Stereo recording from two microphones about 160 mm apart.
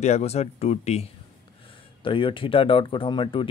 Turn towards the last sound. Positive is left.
turn(degrees=30)  # may be behind; listen again after turning